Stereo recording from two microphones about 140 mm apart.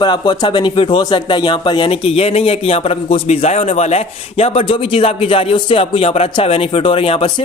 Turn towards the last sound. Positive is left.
turn(degrees=40)  # may be behind; listen again after turning